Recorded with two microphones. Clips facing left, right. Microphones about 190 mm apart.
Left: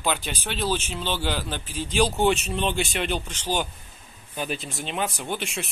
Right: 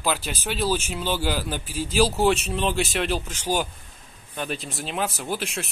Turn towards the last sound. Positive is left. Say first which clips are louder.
# right 1 dB
turn(degrees=0)  # may be behind; listen again after turning